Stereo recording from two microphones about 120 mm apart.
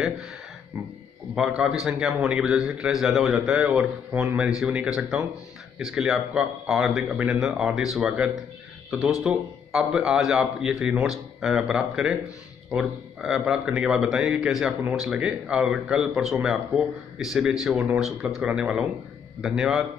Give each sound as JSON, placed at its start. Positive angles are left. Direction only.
{"t": 0.7, "sound": "a man's voice", "side_deg": -10}